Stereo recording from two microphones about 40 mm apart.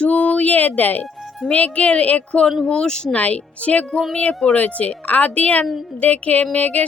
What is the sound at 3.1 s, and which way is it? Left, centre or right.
Speech, left.